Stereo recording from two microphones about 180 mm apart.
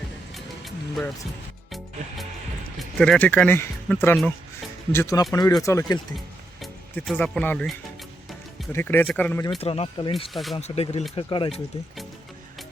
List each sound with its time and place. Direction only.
0.3 s music: centre (ahead or behind)
2.7 s speech: 5° left (ahead or behind)
6.1 s speech: centre (ahead or behind)
9.6 s speech: 35° left (ahead or behind)
10.3 s speech: centre (ahead or behind)
10.6 s speech: 35° left (ahead or behind)